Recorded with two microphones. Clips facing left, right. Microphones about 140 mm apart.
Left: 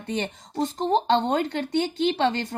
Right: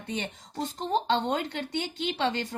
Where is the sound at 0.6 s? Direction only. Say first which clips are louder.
Left 7 dB; 40° left (ahead or behind).